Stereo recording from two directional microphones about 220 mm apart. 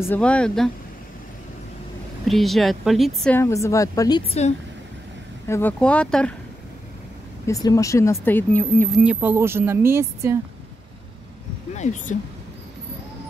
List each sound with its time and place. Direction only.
0.0 s speech: 5° left (ahead or behind)
2.2 s speech: centre (ahead or behind)
3.3 s speech: 10° left (ahead or behind)
4.3 s speech: 30° left (ahead or behind)
5.5 s speech: 10° left (ahead or behind)
7.4 s speech: 15° left (ahead or behind)
9.0 s speech: 5° right (ahead or behind)
11.7 s speech: 30° left (ahead or behind)